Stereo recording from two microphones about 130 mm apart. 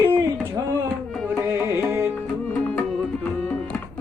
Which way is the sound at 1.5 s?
20° right (ahead or behind).